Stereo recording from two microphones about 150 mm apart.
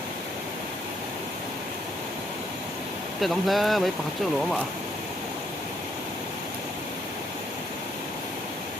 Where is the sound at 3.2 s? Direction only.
Centre (ahead or behind).